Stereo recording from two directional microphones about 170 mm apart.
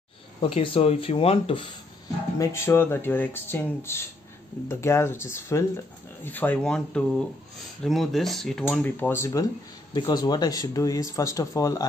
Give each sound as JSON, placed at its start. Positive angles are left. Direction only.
{"t": 0.4, "sound": "speech", "side_deg": 30}
{"t": 2.3, "sound": "speech", "side_deg": 15}